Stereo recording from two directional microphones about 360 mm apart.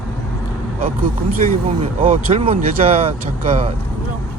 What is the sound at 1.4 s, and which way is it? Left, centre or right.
Speech, centre.